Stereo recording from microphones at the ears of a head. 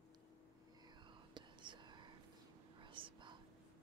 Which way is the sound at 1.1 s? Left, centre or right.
Right.